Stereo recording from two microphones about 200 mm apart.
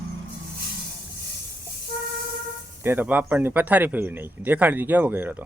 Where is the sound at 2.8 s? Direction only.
10° right (ahead or behind).